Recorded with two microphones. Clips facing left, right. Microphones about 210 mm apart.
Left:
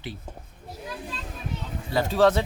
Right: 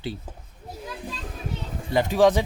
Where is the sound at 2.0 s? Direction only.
15° right (ahead or behind).